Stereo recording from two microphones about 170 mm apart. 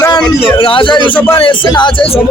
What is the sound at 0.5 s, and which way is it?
A man's voice, 30° left (ahead or behind).